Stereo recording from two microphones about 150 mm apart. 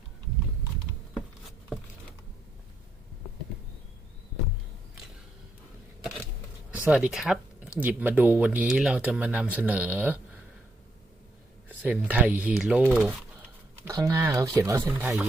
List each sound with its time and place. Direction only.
1.1 s a sound: centre (ahead or behind)
6.7 s speech: 10° right (ahead or behind)
11.8 s speech: 10° right (ahead or behind)
13.8 s speech: 20° right (ahead or behind)